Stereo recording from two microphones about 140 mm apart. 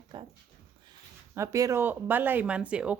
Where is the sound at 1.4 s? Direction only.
20° right (ahead or behind).